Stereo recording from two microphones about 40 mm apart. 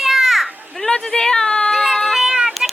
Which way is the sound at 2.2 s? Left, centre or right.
Centre.